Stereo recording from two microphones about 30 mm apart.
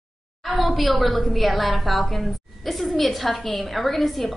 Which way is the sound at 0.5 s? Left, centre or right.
Centre.